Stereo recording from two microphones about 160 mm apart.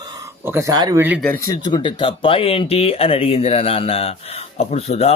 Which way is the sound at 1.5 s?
25° left (ahead or behind).